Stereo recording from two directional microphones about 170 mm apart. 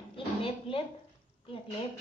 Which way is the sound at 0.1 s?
30° left (ahead or behind).